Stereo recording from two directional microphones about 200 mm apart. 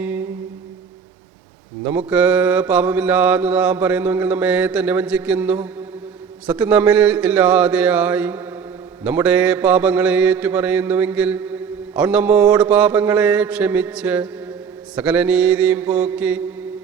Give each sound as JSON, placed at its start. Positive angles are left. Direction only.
{"t": 0.0, "sound": "music", "side_deg": -10}
{"t": 1.8, "sound": "mantra", "side_deg": -5}